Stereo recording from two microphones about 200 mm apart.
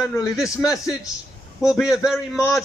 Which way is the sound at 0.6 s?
15° left (ahead or behind).